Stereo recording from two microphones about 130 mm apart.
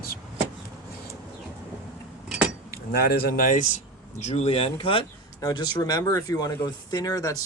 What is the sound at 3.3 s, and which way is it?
Speech, 90° left.